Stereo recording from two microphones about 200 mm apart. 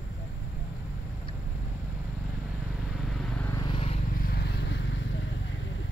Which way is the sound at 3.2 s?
5° left (ahead or behind).